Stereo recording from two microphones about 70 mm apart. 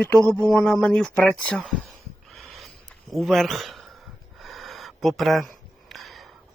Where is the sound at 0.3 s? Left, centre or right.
Centre.